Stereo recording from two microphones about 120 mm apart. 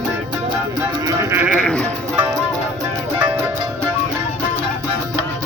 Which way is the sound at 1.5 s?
5° left (ahead or behind).